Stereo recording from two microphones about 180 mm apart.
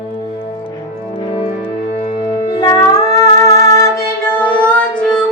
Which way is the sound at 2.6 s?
20° left (ahead or behind).